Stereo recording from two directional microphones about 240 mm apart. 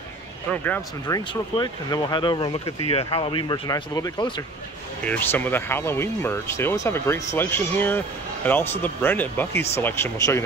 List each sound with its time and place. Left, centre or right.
1.0 s speech: centre